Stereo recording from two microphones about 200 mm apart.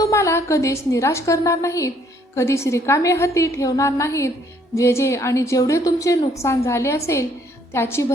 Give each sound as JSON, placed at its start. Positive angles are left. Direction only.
{"t": 0.0, "sound": "a woman's voice", "side_deg": 15}